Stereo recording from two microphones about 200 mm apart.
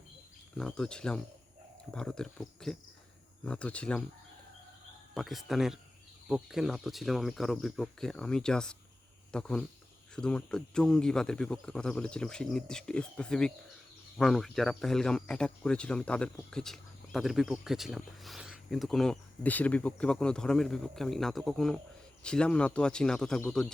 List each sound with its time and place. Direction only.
0.5 s speech: 5° left (ahead or behind)
5.1 s speech: centre (ahead or behind)